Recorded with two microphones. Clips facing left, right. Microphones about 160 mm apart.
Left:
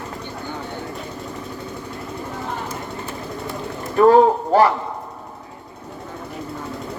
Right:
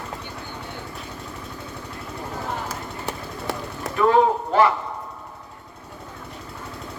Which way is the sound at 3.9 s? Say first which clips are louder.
Left 6 dB; 40° left (ahead or behind).